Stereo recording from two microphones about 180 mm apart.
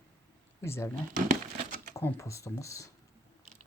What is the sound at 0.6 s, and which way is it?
Speech, 15° left (ahead or behind).